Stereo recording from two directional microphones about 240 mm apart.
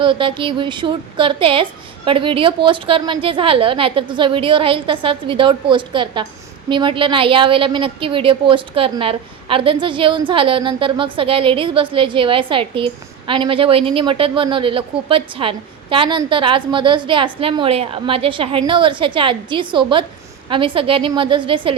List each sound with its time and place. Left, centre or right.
0.0 s a woman's voice: right